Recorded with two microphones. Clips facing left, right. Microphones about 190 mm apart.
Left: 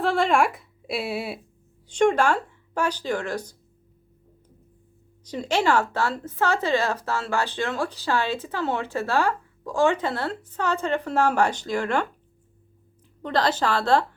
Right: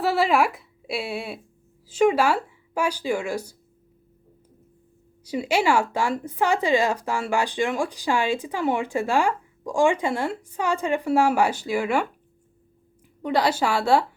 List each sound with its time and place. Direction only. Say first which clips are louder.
0.0 s a woman's voice: even; 5° right (ahead or behind)
5.2 s a woman's voice: right 1 dB; 10° right (ahead or behind)
13.2 s a woman's voice: right 1 dB; 10° right (ahead or behind)